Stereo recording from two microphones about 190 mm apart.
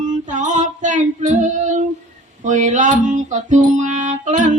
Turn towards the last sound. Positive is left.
turn(degrees=-40)  # may be behind; listen again after turning